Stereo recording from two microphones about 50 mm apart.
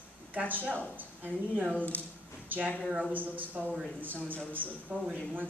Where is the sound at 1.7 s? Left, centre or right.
Left.